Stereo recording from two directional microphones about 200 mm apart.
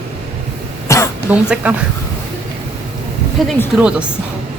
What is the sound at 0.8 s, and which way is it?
Throat clearing, 15° left (ahead or behind).